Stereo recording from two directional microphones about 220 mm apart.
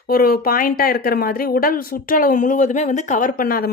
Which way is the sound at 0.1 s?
40° left (ahead or behind).